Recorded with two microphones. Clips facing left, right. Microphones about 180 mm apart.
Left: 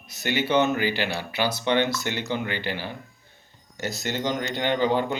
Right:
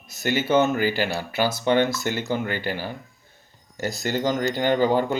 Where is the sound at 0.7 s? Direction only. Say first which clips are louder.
Right 2 dB; 45° right (ahead or behind).